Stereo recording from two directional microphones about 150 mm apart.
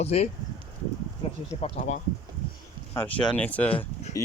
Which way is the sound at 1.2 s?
40° left (ahead or behind).